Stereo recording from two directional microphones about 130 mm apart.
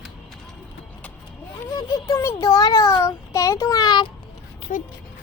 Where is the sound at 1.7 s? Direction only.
25° left (ahead or behind).